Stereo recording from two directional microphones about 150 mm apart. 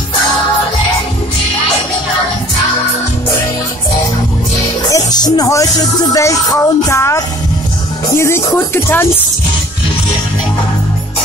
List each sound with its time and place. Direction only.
4.8 s music: 25° left (ahead or behind)
8.2 s speech: 15° left (ahead or behind)